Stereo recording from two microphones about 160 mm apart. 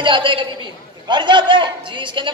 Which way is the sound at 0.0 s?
30° right (ahead or behind).